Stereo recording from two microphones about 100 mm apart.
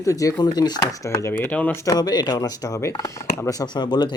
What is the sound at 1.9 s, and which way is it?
Speech, 40° left (ahead or behind).